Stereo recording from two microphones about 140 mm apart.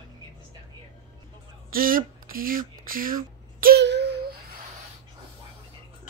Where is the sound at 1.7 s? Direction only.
90° right.